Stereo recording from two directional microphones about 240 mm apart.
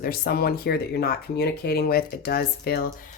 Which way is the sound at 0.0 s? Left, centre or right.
Left.